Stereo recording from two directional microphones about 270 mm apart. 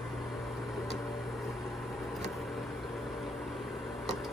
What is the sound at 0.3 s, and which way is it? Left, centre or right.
Microwave oven, centre.